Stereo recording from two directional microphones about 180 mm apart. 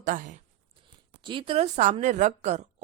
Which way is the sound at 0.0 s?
50° right (ahead or behind).